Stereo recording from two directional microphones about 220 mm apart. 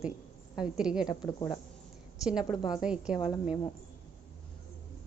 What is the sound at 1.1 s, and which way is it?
Speech, 20° left (ahead or behind).